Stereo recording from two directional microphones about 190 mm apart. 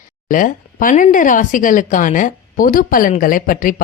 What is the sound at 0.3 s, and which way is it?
A woman's voice, 45° left (ahead or behind).